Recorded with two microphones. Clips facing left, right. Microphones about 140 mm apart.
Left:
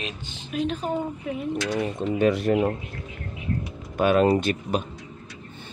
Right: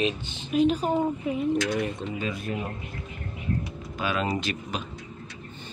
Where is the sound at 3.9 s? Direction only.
55° left (ahead or behind).